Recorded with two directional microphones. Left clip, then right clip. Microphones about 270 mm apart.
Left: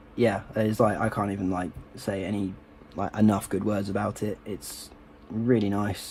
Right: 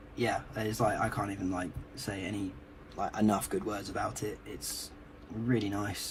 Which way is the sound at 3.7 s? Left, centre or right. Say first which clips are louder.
Left 6 dB; left.